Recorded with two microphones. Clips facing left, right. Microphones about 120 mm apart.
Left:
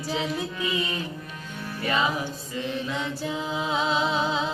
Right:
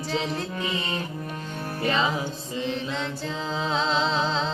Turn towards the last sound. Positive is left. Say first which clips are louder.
# even
turn(degrees=10)  # may be behind; listen again after turning